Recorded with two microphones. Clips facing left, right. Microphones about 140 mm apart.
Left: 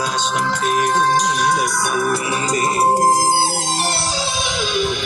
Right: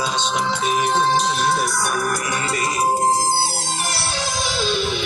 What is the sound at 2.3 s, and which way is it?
Music, 35° left (ahead or behind).